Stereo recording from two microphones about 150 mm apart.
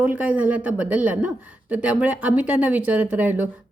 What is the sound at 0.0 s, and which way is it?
Speech, 10° right (ahead or behind).